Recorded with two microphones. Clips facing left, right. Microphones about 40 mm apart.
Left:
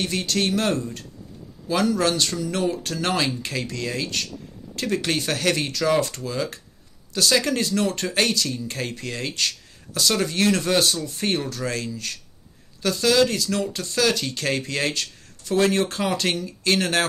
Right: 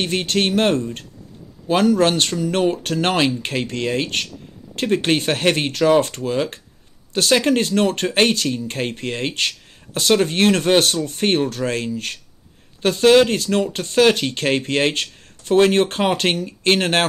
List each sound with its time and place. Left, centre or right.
0.0 s speech: right